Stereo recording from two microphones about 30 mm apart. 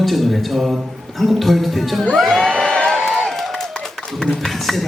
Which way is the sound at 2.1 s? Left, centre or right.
Centre.